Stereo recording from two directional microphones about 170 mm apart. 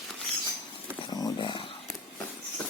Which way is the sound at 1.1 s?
25° left (ahead or behind).